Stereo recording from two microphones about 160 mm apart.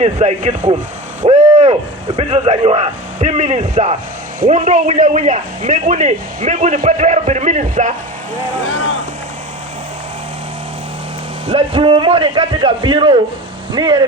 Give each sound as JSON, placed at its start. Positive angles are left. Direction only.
{"t": 0.0, "sound": "a man's voice", "side_deg": -40}
{"t": 1.2, "sound": "a sound", "side_deg": -40}
{"t": 2.1, "sound": "a man's voice", "side_deg": -40}
{"t": 11.4, "sound": "a man's voice", "side_deg": -40}